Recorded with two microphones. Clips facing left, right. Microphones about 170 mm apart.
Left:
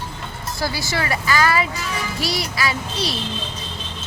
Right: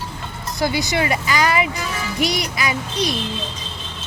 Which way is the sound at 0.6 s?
20° right (ahead or behind).